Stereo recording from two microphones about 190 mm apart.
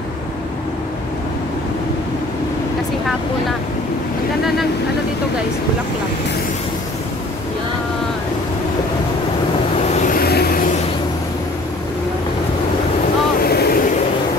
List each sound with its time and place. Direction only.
9.9 s vehicle: 45° left (ahead or behind)
13.4 s vehicle: 55° left (ahead or behind)